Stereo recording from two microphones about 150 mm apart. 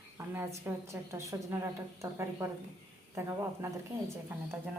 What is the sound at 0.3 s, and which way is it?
A woman's voice, 15° right (ahead or behind).